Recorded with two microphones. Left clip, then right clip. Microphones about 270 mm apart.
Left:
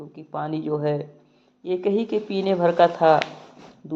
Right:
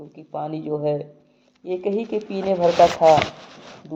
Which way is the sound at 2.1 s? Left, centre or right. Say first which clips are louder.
Left 1 dB; left.